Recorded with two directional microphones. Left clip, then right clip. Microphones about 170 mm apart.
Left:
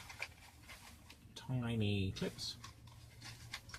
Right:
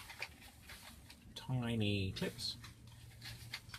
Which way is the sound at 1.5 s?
20° right (ahead or behind).